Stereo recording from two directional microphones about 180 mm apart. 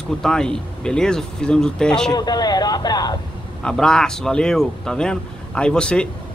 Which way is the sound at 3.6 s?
5° left (ahead or behind).